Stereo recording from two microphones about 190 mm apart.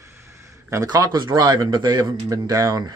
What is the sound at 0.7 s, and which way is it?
A man's voice, 20° right (ahead or behind).